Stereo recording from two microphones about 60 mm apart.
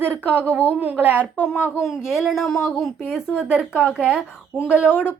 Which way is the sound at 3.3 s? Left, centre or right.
Centre.